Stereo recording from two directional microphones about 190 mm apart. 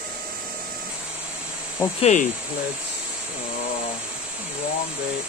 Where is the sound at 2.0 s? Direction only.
35° left (ahead or behind).